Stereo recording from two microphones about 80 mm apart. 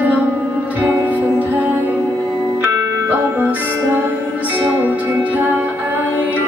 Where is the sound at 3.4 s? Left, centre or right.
Right.